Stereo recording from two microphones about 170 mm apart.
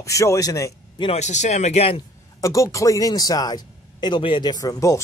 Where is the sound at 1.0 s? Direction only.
40° left (ahead or behind).